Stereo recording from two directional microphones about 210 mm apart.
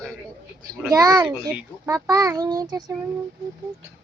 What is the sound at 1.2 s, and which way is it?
A child's voice, 5° right (ahead or behind).